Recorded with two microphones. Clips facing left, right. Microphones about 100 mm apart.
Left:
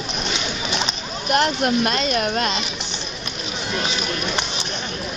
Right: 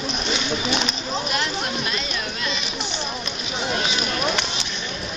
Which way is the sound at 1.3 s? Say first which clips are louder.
Left 7 dB; 55° left (ahead or behind).